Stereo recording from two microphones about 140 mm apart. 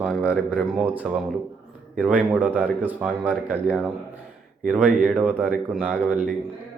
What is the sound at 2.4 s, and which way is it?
Speech, 15° right (ahead or behind).